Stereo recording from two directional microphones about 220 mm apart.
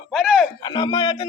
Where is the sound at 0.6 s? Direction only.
20° left (ahead or behind).